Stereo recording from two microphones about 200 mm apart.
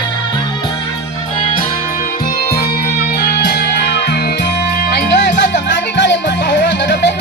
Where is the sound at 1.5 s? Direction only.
45° left (ahead or behind).